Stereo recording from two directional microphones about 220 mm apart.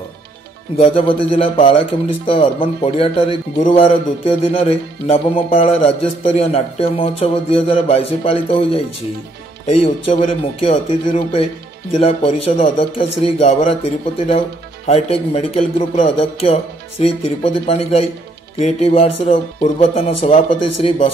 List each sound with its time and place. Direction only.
0.7 s speech: 25° left (ahead or behind)
12.0 s speech: 25° left (ahead or behind)
14.9 s speech: 30° left (ahead or behind)